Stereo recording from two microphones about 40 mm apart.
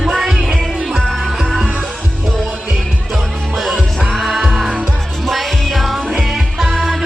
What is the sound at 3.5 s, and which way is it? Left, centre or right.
Music, centre.